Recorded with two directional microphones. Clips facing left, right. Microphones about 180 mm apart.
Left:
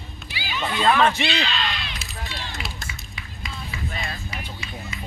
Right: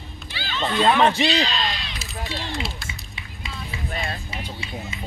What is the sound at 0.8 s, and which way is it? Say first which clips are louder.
Speech: right 1 dB; 20° right (ahead or behind).